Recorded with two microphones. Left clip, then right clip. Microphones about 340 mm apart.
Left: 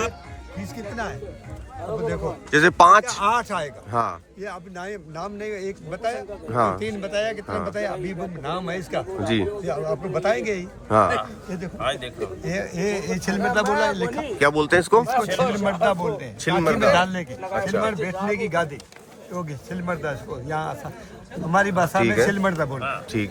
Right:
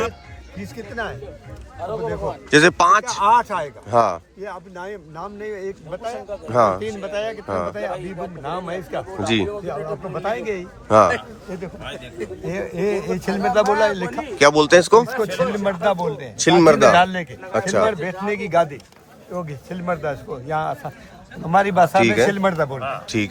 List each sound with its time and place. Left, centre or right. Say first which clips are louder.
0.6 s speech: right 2 dB; centre
3.2 s speech: right 5 dB; centre
12.5 s speech: right 4 dB; centre
14.3 s speech: right 6 dB; centre
15.3 s speech: right 1 dB; centre
22.0 s speech: right 3 dB; centre
22.3 s speech: right 3 dB; right
22.8 s speech: right 3 dB; centre